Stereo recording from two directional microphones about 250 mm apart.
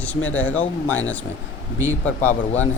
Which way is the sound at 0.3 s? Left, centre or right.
Centre.